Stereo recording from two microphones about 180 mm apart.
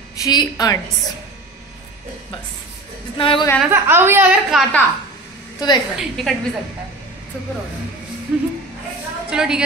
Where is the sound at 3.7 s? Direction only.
10° right (ahead or behind).